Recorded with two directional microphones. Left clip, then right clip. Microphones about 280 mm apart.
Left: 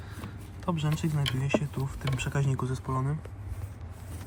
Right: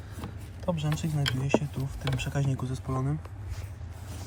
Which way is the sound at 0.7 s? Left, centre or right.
Centre.